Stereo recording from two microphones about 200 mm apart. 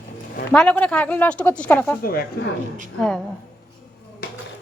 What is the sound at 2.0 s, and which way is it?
Speech, 50° left (ahead or behind).